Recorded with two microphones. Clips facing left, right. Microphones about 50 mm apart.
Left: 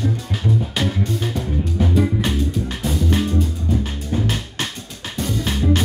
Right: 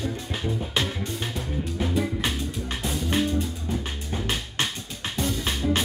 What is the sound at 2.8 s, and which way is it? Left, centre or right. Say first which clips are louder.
Music: left 4 dB; centre.